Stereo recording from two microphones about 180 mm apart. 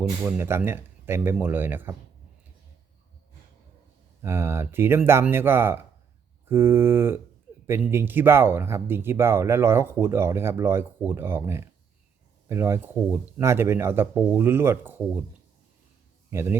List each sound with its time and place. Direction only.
0.3 s speech: 15° right (ahead or behind)
4.2 s speech: 15° right (ahead or behind)
16.3 s speech: 15° right (ahead or behind)